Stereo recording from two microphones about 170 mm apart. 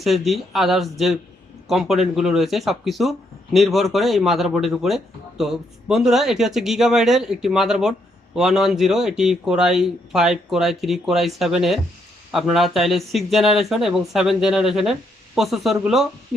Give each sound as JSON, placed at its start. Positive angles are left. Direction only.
{"t": 0.0, "sound": "speech", "side_deg": 0}